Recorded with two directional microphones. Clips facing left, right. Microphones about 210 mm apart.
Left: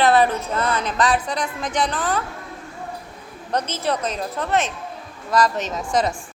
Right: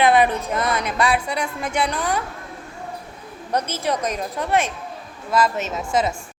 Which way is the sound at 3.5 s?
10° right (ahead or behind).